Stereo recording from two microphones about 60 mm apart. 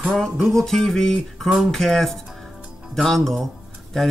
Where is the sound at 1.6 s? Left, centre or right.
Centre.